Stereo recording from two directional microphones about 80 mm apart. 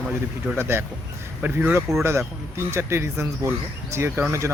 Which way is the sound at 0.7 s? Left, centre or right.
Right.